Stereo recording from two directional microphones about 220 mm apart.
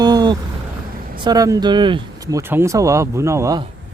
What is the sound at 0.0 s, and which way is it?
Vehicle, 20° right (ahead or behind).